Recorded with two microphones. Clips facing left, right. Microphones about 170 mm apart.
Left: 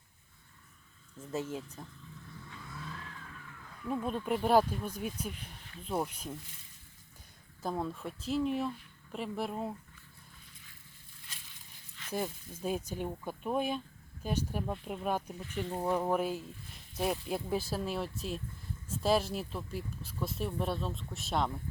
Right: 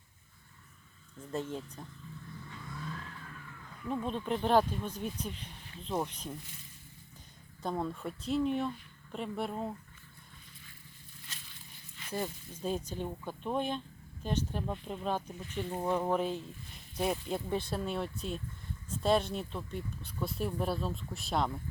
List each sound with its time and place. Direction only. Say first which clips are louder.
1.3 s speech: even; 5° left (ahead or behind)
2.4 s vehicle: right 2 dB; centre (ahead or behind)
5.8 s speech: even; 10° left (ahead or behind)
7.6 s speech: right 1 dB; centre (ahead or behind)
12.1 s speech: left 1 dB; 10° left (ahead or behind)